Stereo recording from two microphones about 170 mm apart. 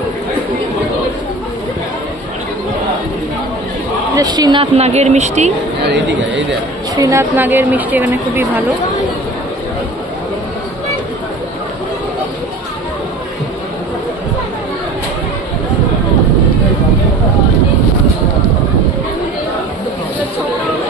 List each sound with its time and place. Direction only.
4.1 s a woman's voice: 25° right (ahead or behind)
4.7 s speech: 40° right (ahead or behind)
5.9 s speech: 90° right
7.0 s speech: 20° right (ahead or behind)